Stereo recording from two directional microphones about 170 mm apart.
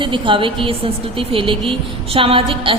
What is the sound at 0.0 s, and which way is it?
A woman's voice, 30° right (ahead or behind).